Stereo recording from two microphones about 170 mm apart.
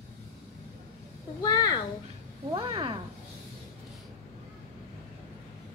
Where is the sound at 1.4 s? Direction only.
25° left (ahead or behind).